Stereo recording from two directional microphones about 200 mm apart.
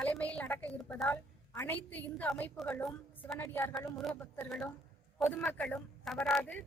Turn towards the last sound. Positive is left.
turn(degrees=5)  # may be behind; listen again after turning